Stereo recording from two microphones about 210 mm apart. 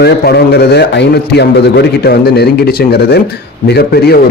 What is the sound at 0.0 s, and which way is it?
A man's voice, 50° left (ahead or behind).